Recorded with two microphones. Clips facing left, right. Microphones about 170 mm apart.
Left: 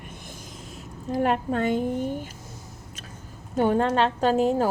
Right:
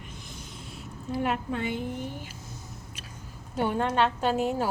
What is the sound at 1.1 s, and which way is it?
Speech, 40° left (ahead or behind).